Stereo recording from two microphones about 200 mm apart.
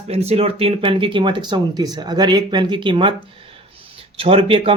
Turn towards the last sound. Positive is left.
turn(degrees=-25)  # may be behind; listen again after turning